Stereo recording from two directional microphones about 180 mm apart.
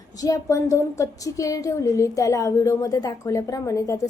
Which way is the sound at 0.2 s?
20° left (ahead or behind).